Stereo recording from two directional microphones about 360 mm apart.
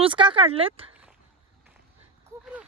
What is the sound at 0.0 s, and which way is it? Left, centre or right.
Speech, centre.